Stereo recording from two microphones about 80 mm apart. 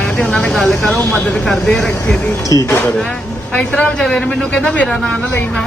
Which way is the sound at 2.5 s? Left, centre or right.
Left.